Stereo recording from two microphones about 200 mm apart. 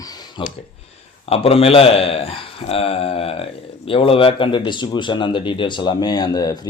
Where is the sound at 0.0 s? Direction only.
20° left (ahead or behind).